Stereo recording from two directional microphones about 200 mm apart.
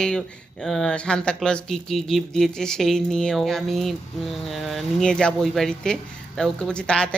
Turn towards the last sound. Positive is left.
turn(degrees=5)  # may be behind; listen again after turning